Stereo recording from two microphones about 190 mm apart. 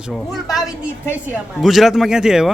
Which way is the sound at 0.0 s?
Centre (ahead or behind).